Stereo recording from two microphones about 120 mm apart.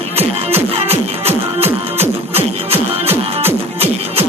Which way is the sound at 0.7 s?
60° right (ahead or behind).